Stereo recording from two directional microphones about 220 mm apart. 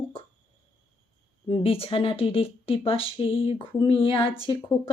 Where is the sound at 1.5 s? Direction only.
25° left (ahead or behind).